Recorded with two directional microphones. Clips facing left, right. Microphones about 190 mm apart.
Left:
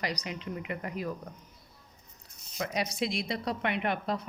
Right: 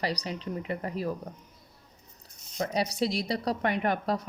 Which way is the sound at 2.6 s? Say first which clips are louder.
Right 4 dB; 35° right (ahead or behind).